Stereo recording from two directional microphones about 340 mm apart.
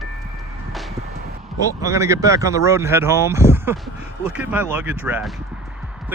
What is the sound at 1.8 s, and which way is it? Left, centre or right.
Speech, centre.